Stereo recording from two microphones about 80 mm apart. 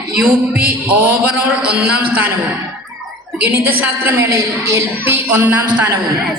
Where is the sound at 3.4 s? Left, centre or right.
Right.